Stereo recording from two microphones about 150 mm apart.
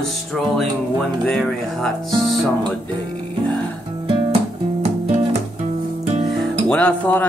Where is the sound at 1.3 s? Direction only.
5° left (ahead or behind).